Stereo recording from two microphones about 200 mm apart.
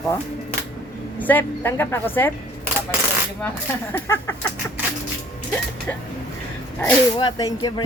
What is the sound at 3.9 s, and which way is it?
Speech, 10° left (ahead or behind).